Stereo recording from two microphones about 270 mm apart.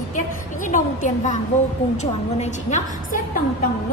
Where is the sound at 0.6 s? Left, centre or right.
Left.